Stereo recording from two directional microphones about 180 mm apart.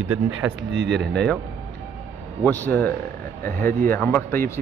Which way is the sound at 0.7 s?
80° right.